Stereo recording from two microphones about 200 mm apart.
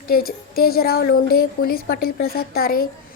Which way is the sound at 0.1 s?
50° left (ahead or behind).